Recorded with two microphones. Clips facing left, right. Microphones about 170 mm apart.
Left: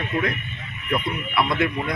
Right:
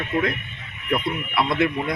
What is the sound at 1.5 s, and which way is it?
Speech, 25° right (ahead or behind).